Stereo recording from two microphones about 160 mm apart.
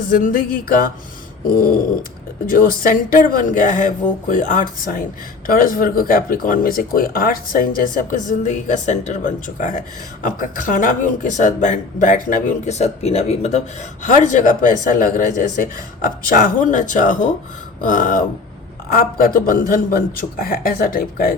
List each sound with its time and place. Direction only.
0.1 s speech: 55° left (ahead or behind)